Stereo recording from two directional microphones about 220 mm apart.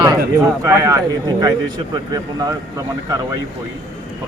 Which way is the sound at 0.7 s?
15° right (ahead or behind).